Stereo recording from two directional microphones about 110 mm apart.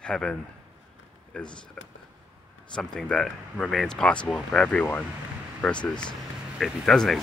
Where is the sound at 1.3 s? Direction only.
10° left (ahead or behind).